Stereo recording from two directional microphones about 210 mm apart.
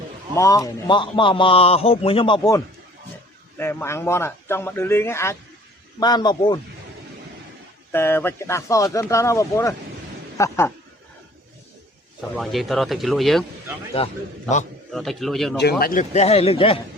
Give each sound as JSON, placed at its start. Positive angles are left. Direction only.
{"t": 0.3, "sound": "a man's voice", "side_deg": 15}
{"t": 3.6, "sound": "a man's voice", "side_deg": 10}
{"t": 7.9, "sound": "speech", "side_deg": 10}
{"t": 12.4, "sound": "speech", "side_deg": 0}
{"t": 14.0, "sound": "a man's voice", "side_deg": 25}
{"t": 14.9, "sound": "speech", "side_deg": 0}
{"t": 15.8, "sound": "a man's voice", "side_deg": 40}